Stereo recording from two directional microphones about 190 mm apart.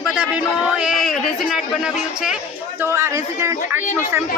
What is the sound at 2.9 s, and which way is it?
A man's voice, 15° right (ahead or behind).